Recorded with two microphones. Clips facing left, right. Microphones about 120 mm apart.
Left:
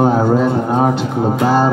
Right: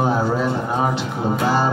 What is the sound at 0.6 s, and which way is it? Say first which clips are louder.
Speech: left 6 dB; 55° left (ahead or behind).